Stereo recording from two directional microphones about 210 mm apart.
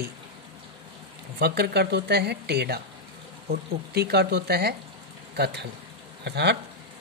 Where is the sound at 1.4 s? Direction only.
50° right (ahead or behind).